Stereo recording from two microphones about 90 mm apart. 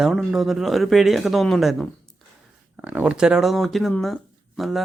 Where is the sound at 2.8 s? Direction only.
15° right (ahead or behind).